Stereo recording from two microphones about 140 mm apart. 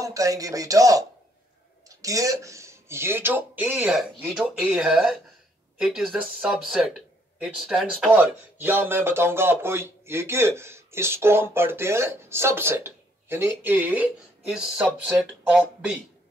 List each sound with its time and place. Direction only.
0.0 s speech: 25° right (ahead or behind)
1.9 s a sound: 25° right (ahead or behind)
2.4 s speech: 20° right (ahead or behind)